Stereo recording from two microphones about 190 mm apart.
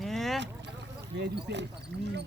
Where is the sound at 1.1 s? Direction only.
65° right (ahead or behind).